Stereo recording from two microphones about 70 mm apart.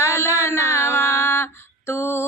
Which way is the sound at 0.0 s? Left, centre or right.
Left.